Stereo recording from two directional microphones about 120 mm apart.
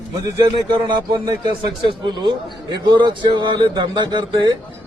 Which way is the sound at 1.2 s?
40° right (ahead or behind).